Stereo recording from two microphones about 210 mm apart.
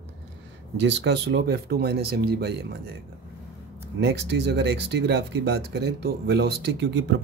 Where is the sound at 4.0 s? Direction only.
50° right (ahead or behind).